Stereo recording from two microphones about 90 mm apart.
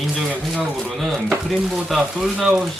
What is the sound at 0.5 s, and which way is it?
Speech, centre (ahead or behind).